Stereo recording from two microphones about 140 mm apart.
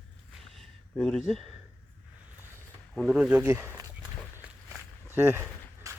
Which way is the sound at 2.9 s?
Centre (ahead or behind).